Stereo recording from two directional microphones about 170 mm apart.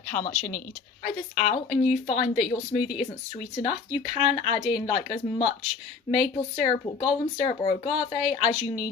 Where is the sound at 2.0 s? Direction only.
35° left (ahead or behind).